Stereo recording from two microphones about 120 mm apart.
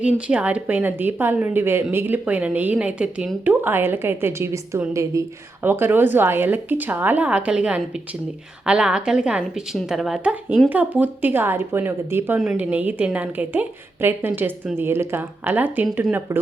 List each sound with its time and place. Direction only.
0.0 s a woman's voice: 10° right (ahead or behind)
10.7 s a woman's voice: 10° right (ahead or behind)